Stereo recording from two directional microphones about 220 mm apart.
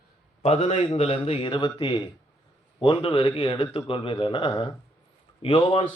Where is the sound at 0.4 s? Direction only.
30° left (ahead or behind).